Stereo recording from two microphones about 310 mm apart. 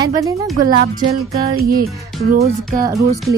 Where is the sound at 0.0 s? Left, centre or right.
Centre.